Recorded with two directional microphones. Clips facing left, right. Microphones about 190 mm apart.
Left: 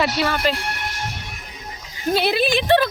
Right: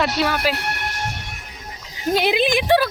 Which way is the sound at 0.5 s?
65° right (ahead or behind).